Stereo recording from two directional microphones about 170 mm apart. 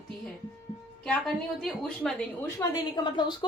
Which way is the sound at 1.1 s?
Centre (ahead or behind).